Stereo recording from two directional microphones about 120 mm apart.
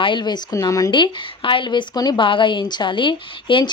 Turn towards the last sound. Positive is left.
turn(degrees=45)  # may be behind; listen again after turning